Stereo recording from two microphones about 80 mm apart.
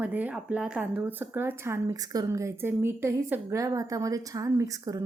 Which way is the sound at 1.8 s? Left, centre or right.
Right.